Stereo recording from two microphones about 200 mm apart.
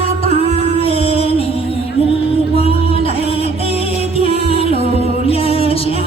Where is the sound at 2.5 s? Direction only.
30° left (ahead or behind).